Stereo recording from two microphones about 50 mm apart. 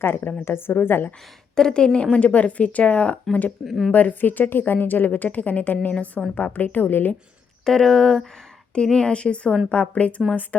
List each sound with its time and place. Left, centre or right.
0.0 s a woman's voice: left
1.5 s speech: centre
2.1 s a woman's voice: left
3.6 s a woman's voice: centre
3.9 s a woman's voice: left
7.6 s a woman's voice: centre; by 10.7 s left